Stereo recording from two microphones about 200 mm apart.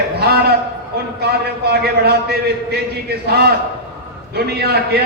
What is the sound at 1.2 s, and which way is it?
Speech, 55° right (ahead or behind).